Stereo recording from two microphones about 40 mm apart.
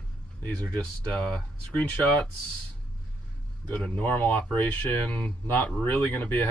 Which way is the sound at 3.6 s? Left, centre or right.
Left.